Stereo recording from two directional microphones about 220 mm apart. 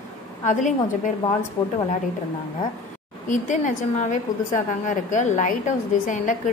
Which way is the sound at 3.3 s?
35° left (ahead or behind).